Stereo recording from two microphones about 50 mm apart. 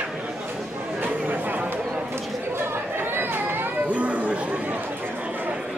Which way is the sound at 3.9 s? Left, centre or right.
Right.